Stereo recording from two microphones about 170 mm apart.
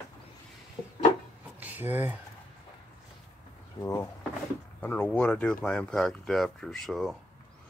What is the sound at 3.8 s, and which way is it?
Speech, 15° left (ahead or behind).